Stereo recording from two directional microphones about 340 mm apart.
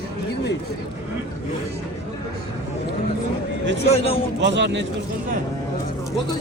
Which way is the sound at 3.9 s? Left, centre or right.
Centre.